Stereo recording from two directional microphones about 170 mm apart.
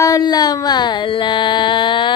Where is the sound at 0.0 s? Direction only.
20° left (ahead or behind).